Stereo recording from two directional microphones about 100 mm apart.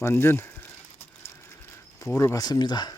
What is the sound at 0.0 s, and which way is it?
Speech, 25° left (ahead or behind).